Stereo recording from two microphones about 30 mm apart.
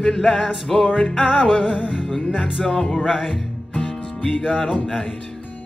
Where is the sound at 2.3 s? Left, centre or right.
Centre.